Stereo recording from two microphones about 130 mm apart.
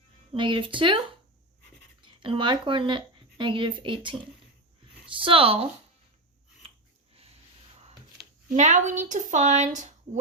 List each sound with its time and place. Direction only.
0.3 s speech: 40° right (ahead or behind)
8.4 s speech: 65° right (ahead or behind)